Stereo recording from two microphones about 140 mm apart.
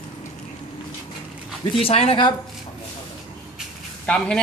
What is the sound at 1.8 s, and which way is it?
Speech, 45° left (ahead or behind).